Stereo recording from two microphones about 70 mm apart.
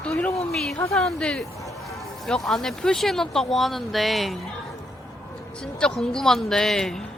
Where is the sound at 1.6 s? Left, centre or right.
Left.